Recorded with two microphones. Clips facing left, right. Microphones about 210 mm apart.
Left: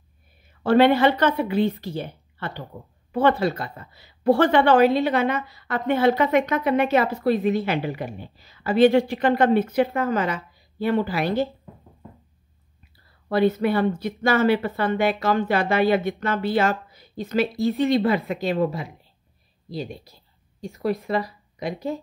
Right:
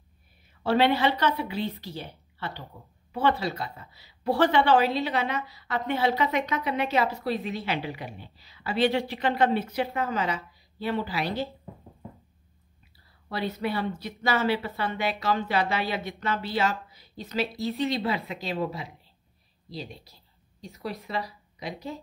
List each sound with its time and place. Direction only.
0.7 s a woman's voice: 50° left (ahead or behind)
13.3 s a woman's voice: 50° left (ahead or behind)